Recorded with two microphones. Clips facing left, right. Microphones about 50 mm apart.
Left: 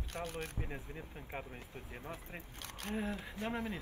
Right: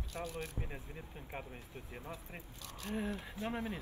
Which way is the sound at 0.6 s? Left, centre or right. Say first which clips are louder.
Left 2 dB; centre.